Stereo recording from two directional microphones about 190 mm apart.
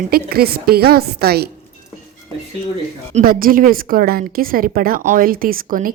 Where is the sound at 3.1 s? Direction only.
50° right (ahead or behind).